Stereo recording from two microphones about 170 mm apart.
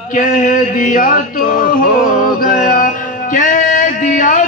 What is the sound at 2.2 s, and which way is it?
Music, 55° left (ahead or behind).